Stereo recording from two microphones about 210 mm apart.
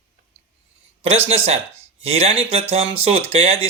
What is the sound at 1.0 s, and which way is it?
Speech, 30° right (ahead or behind).